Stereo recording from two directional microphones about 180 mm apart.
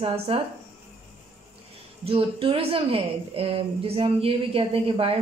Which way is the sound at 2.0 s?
30° right (ahead or behind).